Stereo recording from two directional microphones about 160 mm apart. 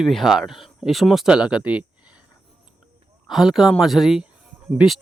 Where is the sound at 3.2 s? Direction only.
Centre (ahead or behind).